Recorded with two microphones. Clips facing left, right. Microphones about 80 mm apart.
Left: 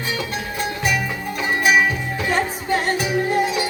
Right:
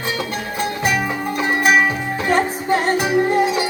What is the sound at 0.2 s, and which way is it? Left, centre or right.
Music, right.